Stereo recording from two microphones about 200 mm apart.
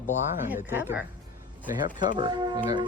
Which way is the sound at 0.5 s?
10° right (ahead or behind).